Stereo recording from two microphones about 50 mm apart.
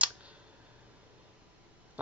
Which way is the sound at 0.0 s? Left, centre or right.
Right.